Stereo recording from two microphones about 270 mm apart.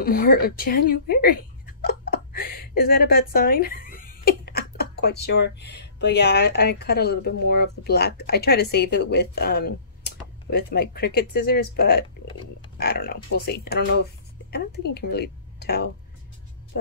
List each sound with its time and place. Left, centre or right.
0.0 s a woman's voice: left